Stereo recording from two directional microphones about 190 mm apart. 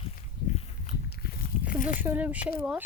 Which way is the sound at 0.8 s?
55° left (ahead or behind).